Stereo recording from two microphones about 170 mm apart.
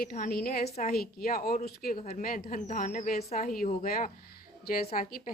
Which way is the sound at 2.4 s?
40° left (ahead or behind).